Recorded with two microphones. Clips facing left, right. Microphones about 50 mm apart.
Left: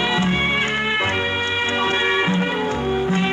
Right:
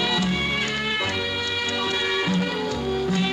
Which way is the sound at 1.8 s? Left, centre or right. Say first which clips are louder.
Left 6 dB; left.